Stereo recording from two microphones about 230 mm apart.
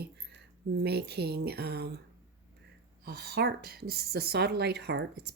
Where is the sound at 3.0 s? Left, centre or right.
Right.